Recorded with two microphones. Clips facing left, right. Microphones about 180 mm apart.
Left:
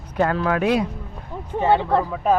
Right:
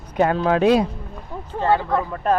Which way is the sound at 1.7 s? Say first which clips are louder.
Left 2 dB; 30° left (ahead or behind).